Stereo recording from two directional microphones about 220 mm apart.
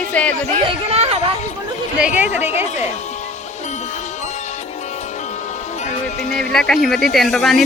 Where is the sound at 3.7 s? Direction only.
30° left (ahead or behind).